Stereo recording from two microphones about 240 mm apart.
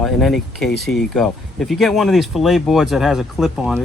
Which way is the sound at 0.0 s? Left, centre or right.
Centre.